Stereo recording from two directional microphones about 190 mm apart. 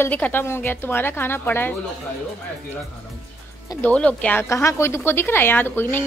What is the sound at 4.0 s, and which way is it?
A woman's voice, 5° left (ahead or behind).